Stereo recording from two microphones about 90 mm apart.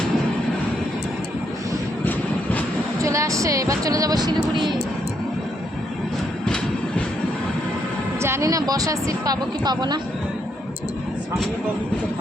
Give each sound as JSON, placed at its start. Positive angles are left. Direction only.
{"t": 2.0, "sound": "train", "side_deg": 15}
{"t": 3.0, "sound": "speech", "side_deg": -35}
{"t": 8.2, "sound": "speech", "side_deg": -30}